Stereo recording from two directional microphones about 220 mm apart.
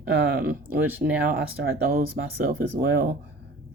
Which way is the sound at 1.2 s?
45° right (ahead or behind).